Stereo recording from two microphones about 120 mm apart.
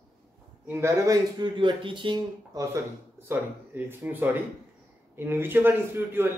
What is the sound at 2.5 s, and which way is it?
A man's voice, 25° right (ahead or behind).